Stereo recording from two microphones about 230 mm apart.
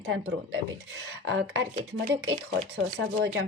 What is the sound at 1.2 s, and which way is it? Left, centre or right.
A woman's voice, right.